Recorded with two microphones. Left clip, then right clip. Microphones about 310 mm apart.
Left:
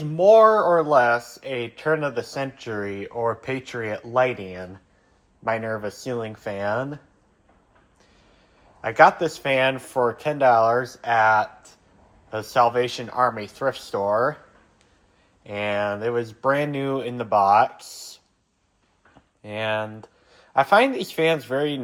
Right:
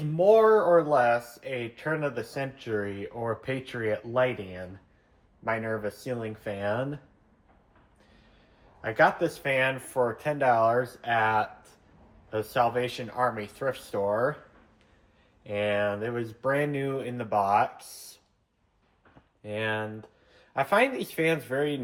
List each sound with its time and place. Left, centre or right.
0.2 s speech: centre
8.8 s speech: centre
15.4 s speech: centre
19.4 s speech: centre